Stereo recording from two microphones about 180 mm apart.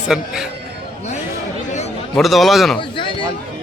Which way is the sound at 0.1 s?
5° right (ahead or behind).